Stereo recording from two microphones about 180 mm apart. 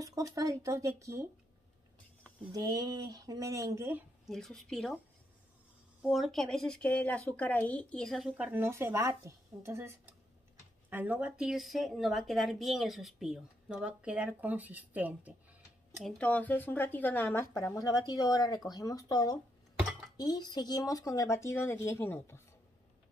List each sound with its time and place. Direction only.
0.0 s speech: 20° right (ahead or behind)
2.5 s speech: 20° right (ahead or behind)
4.3 s a woman's voice: centre (ahead or behind)
6.0 s a woman's voice: centre (ahead or behind)
16.0 s speech: 5° left (ahead or behind)